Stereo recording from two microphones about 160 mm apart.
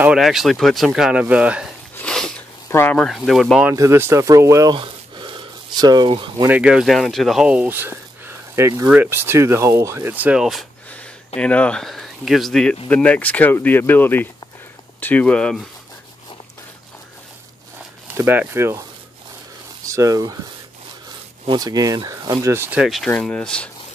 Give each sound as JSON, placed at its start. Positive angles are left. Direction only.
{"t": 0.0, "sound": "speech", "side_deg": -5}
{"t": 2.0, "sound": "a sound", "side_deg": 5}
{"t": 2.7, "sound": "speech", "side_deg": 10}
{"t": 3.6, "sound": "speech", "side_deg": -15}
{"t": 4.7, "sound": "a sound", "side_deg": -30}
{"t": 6.4, "sound": "speech", "side_deg": -10}
{"t": 18.1, "sound": "speech", "side_deg": -15}
{"t": 19.8, "sound": "speech", "side_deg": -20}
{"t": 21.5, "sound": "speech", "side_deg": -25}
{"t": 22.8, "sound": "speech", "side_deg": 0}